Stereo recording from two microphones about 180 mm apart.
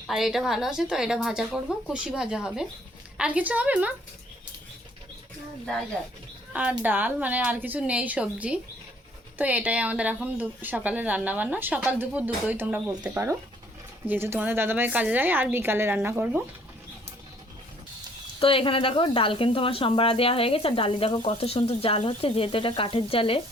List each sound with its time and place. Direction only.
0.1 s a woman's voice: centre (ahead or behind)
6.5 s a woman's voice: 10° right (ahead or behind)
18.3 s speech: 30° left (ahead or behind)